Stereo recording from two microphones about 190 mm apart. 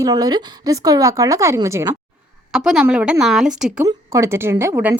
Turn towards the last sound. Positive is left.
turn(degrees=-10)  # may be behind; listen again after turning